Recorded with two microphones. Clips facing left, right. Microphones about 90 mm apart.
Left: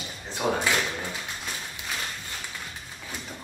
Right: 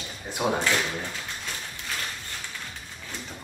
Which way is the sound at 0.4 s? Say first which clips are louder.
Even; 10° right (ahead or behind).